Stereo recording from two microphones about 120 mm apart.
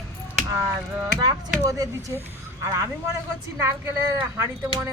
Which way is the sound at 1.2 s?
30° right (ahead or behind).